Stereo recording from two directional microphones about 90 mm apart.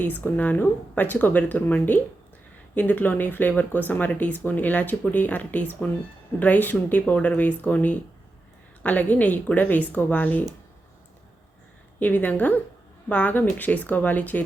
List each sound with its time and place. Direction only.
0.0 s speech: 20° left (ahead or behind)
11.9 s speech: 20° left (ahead or behind)